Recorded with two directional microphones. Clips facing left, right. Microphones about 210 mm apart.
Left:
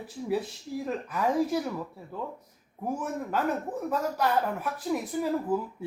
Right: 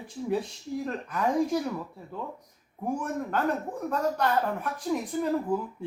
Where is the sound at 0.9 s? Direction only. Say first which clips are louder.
Left 1 dB; 5° left (ahead or behind).